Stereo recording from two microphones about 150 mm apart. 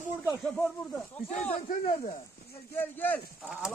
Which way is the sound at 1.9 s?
45° left (ahead or behind).